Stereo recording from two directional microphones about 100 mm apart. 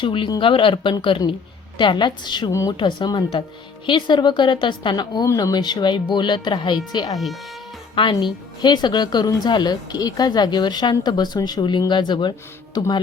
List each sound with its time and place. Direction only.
0.0 s speech: 55° left (ahead or behind)
2.5 s a woman's voice: 30° left (ahead or behind)
2.7 s speech: 55° left (ahead or behind)
8.2 s speech: 50° left (ahead or behind)